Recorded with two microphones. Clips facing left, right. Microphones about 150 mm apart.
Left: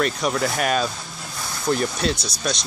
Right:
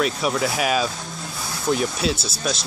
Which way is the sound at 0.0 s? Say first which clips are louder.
Even; centre (ahead or behind).